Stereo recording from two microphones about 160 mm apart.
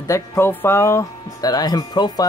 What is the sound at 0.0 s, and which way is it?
Speech, 20° left (ahead or behind).